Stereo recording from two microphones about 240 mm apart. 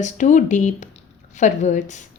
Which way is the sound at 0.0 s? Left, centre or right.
Left.